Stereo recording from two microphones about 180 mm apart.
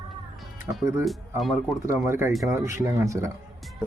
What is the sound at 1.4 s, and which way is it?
Speech, centre (ahead or behind).